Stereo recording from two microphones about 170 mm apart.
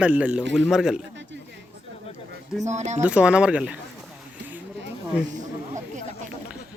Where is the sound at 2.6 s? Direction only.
45° right (ahead or behind).